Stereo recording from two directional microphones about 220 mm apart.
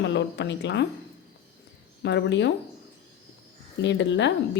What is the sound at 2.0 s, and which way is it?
Speech, 55° left (ahead or behind).